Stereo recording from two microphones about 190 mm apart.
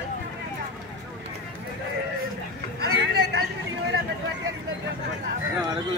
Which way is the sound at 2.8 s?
55° right (ahead or behind).